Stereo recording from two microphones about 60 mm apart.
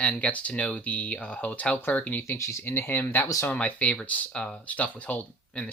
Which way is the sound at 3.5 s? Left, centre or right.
Left.